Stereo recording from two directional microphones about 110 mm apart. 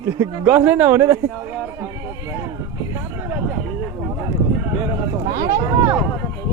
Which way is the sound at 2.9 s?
20° right (ahead or behind).